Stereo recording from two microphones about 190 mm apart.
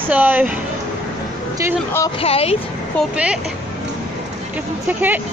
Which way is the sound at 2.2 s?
30° left (ahead or behind).